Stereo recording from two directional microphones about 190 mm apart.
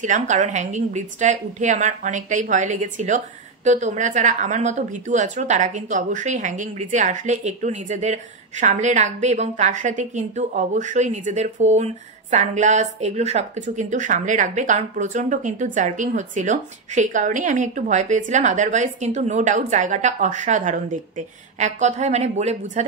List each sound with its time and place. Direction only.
0.0 s a woman's voice: 40° right (ahead or behind)